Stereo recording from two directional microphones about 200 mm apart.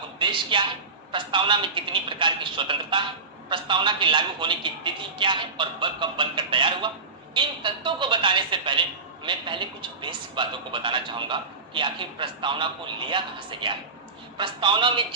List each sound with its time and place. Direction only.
0.2 s a man's voice: 25° right (ahead or behind)